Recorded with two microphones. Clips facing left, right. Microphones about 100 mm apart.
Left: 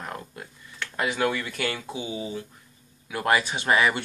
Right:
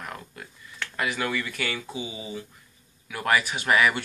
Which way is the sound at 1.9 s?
45° left (ahead or behind).